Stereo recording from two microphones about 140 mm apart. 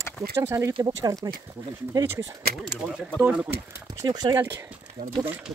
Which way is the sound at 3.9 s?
30° right (ahead or behind).